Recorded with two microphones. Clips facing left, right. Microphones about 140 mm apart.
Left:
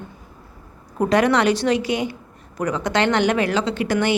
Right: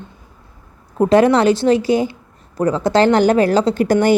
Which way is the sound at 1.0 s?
30° right (ahead or behind).